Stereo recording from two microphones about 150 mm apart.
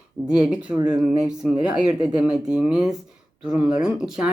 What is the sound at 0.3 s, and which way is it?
Speech, 5° right (ahead or behind).